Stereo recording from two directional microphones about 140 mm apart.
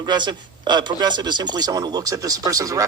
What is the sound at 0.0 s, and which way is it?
A man's voice, 30° right (ahead or behind).